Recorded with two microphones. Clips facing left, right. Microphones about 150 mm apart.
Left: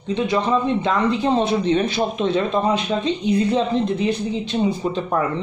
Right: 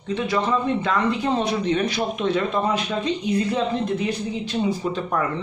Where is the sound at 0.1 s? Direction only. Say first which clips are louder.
Left 3 dB; 25° left (ahead or behind).